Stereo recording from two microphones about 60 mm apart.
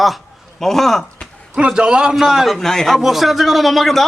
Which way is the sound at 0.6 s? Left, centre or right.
Centre.